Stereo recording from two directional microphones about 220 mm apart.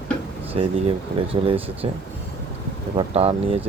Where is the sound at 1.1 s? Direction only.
25° right (ahead or behind).